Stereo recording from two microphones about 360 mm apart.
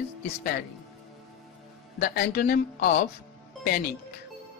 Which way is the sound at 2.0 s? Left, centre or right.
Left.